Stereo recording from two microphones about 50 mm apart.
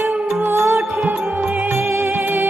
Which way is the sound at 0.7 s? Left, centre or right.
Right.